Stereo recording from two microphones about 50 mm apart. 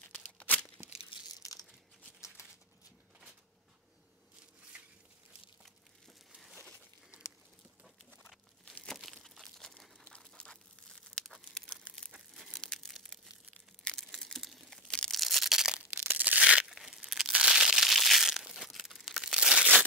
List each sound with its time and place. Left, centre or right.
0.4 s tearing: left
2.2 s a sound: centre
9.2 s crumpling: centre
10.1 s tearing: centre
14.0 s a sound: centre
14.9 s tearing: centre
15.1 s a sound: centre
15.7 s crushing: centre
16.1 s crumpling: right
16.3 s crumpling: centre
16.6 s tearing: centre
17.3 s crumpling: centre